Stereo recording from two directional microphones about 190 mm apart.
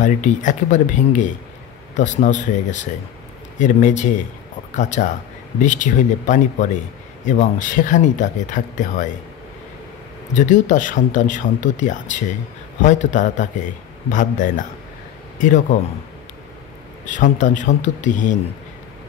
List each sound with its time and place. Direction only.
0.0 s speech: 40° left (ahead or behind)
10.3 s a man's voice: 40° left (ahead or behind)
17.0 s speech: 40° left (ahead or behind)